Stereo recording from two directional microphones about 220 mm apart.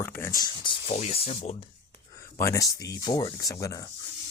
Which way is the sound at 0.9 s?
30° left (ahead or behind).